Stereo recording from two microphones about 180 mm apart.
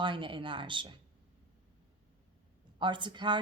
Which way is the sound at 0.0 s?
30° right (ahead or behind).